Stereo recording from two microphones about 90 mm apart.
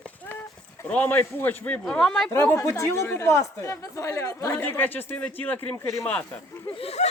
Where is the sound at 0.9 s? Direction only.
20° left (ahead or behind).